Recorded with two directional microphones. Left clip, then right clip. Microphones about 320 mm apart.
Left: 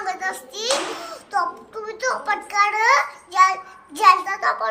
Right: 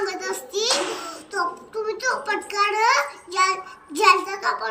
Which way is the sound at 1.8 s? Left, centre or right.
Centre.